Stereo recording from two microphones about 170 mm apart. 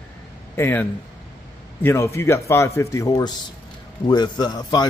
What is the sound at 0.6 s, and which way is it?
A man's voice, 15° left (ahead or behind).